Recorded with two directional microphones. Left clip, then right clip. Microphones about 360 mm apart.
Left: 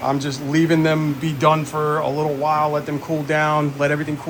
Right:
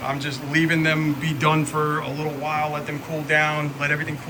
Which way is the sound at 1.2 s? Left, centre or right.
Centre.